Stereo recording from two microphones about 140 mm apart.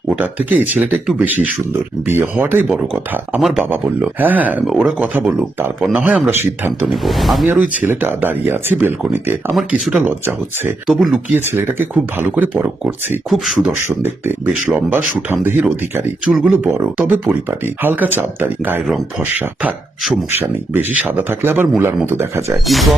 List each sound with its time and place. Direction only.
0.1 s speech: 10° right (ahead or behind)
6.8 s speech: centre (ahead or behind)
7.4 s speech: 10° right (ahead or behind)
10.8 s speech: 5° right (ahead or behind)
11.3 s speech: 15° right (ahead or behind)
13.3 s speech: centre (ahead or behind)
13.7 s speech: 15° right (ahead or behind)
22.5 s speech: centre (ahead or behind)